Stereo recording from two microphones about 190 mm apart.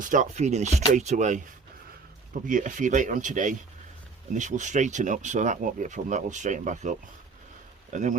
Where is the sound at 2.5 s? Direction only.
45° right (ahead or behind).